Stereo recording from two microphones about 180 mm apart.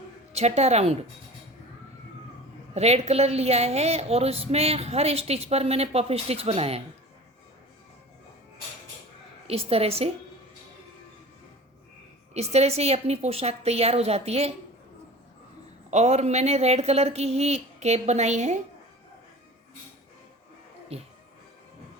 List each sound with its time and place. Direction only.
0.3 s a woman's voice: 35° right (ahead or behind)
2.7 s a woman's voice: 35° right (ahead or behind)
9.5 s a woman's voice: 35° right (ahead or behind)
12.3 s a woman's voice: 35° right (ahead or behind)
15.9 s a woman's voice: 40° right (ahead or behind)
20.9 s a woman's voice: 35° right (ahead or behind)